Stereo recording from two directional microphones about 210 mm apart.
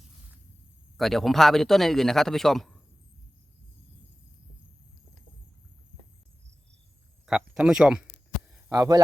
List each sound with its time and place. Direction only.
0.9 s speech: centre (ahead or behind)
7.3 s speech: 5° right (ahead or behind)
8.7 s speech: 15° right (ahead or behind)